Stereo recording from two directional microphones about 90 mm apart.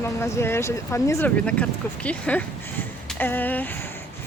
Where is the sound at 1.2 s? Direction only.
15° left (ahead or behind).